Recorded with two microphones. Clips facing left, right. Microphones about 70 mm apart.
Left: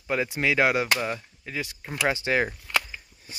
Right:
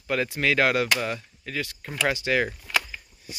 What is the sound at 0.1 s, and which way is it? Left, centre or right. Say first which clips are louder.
Speech: right 1 dB; centre.